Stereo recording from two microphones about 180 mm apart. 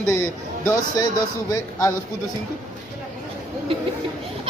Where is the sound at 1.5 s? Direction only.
20° left (ahead or behind).